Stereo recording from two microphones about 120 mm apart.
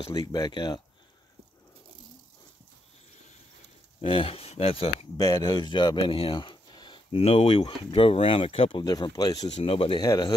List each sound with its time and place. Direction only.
0.1 s speech: 35° left (ahead or behind)
4.0 s speech: 50° left (ahead or behind)
5.1 s speech: 35° left (ahead or behind); by 8.8 s 50° left (ahead or behind)
8.8 s speech: 35° left (ahead or behind)
9.5 s speech: 50° left (ahead or behind)
9.9 s speech: 35° left (ahead or behind)